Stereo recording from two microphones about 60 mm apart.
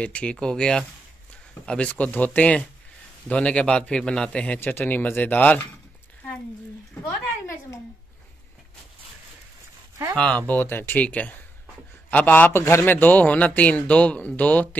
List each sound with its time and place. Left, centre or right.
0.0 s a man's voice: centre
4.7 s speech: left
10.3 s a man's voice: left
11.1 s a man's voice: left
12.5 s a man's voice: left
12.8 s a man's voice: left